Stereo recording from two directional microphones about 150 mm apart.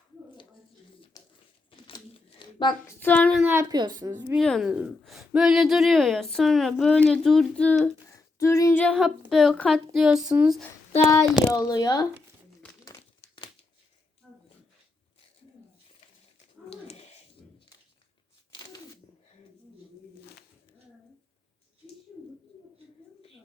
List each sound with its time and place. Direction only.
1.2 s pigeon: 25° left (ahead or behind)
1.7 s crumpling: 35° left (ahead or behind)
2.8 s child singing: 10° left (ahead or behind)
3.4 s speech: 15° right (ahead or behind)
4.4 s speech: centre (ahead or behind)
8.1 s a sound: 20° left (ahead or behind)
8.8 s speech: centre (ahead or behind)
11.5 s speech: 25° left (ahead or behind)
12.8 s crumpling: 30° left (ahead or behind)
14.2 s a sound: centre (ahead or behind)
18.5 s a sound: 25° left (ahead or behind)